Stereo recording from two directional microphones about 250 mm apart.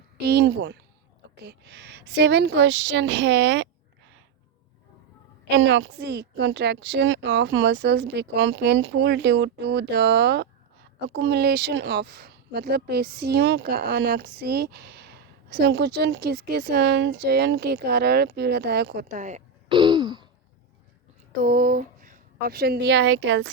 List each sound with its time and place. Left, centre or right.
0.3 s a woman's voice: right
5.5 s a woman's voice: right; by 20.2 s centre
21.4 s speech: right